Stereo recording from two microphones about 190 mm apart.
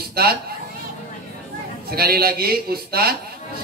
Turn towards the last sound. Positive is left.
turn(degrees=-55)  # may be behind; listen again after turning